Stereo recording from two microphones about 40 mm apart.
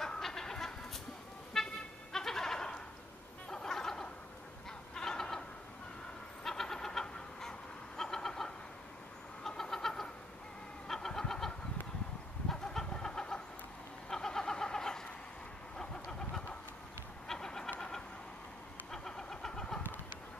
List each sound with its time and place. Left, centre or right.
0.2 s chicken: centre
1.6 s toot: centre
2.1 s goat: centre
3.4 s a sound: centre
4.9 s fowl: centre
6.4 s vehicle: centre
10.9 s chicken: centre
12.9 s vehicle: centre